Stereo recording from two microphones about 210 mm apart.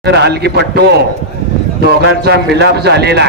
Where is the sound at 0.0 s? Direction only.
50° right (ahead or behind).